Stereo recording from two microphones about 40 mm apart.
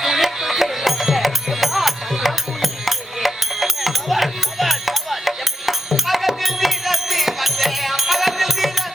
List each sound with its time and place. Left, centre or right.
0.0 s music: centre